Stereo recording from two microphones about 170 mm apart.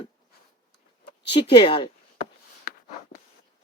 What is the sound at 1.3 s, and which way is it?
Speech, 30° left (ahead or behind).